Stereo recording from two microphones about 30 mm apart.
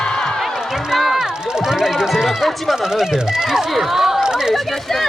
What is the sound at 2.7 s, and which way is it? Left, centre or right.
Speech, right.